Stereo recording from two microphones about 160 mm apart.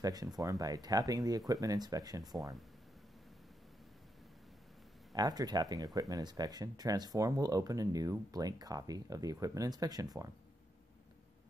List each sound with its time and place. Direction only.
0.0 s speech: 25° right (ahead or behind)
5.1 s speech: 25° right (ahead or behind)